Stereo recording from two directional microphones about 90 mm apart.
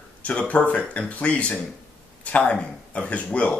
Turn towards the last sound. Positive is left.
turn(degrees=15)  # may be behind; listen again after turning